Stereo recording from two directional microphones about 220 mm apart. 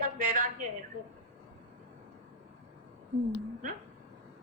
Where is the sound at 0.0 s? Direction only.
35° right (ahead or behind).